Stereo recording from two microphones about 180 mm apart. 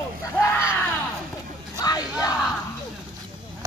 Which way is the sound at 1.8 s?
20° left (ahead or behind).